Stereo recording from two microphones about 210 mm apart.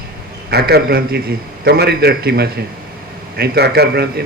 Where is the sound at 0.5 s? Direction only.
50° right (ahead or behind).